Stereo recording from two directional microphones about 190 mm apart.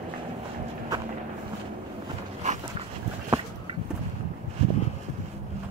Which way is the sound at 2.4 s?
40° right (ahead or behind).